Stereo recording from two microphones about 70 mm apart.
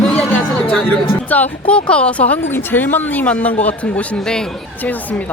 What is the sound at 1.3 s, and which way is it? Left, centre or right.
Speech, left.